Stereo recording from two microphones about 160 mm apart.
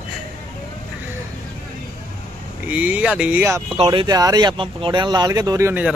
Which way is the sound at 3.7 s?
30° right (ahead or behind).